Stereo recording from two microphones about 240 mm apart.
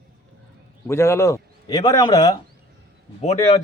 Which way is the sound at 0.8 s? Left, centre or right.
Centre.